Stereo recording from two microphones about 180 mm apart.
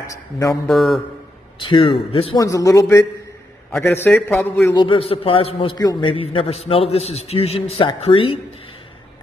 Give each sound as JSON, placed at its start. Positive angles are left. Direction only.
{"t": 0.0, "sound": "a man's voice", "side_deg": 20}
{"t": 0.7, "sound": "a man's voice", "side_deg": 0}
{"t": 1.6, "sound": "a man's voice", "side_deg": 30}
{"t": 2.4, "sound": "a man's voice", "side_deg": 20}
{"t": 4.7, "sound": "a man's voice", "side_deg": 30}